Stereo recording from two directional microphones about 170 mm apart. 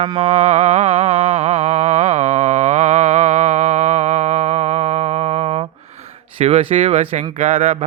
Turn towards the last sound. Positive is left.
turn(degrees=-35)  # may be behind; listen again after turning